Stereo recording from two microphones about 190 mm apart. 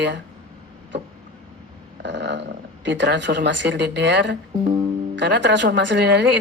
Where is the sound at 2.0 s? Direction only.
65° right (ahead or behind).